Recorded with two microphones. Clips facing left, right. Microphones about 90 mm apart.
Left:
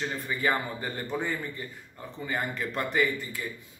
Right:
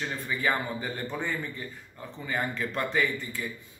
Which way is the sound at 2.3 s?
10° left (ahead or behind).